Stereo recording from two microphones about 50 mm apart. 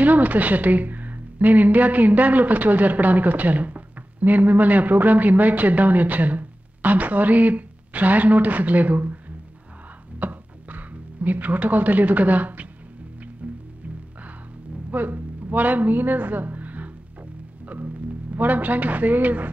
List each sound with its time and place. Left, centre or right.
0.0 s a woman's voice: right
10.2 s music: right
14.9 s a woman's voice: right
18.3 s a woman's voice: right